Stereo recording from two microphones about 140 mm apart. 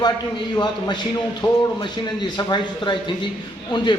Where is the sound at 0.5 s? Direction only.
30° left (ahead or behind).